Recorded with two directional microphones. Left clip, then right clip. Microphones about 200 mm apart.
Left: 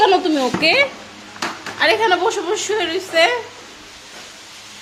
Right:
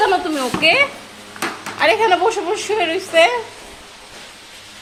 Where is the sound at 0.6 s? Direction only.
20° left (ahead or behind).